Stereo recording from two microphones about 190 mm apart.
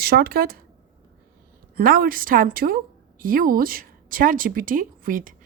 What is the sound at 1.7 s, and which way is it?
A woman's voice, 50° right (ahead or behind).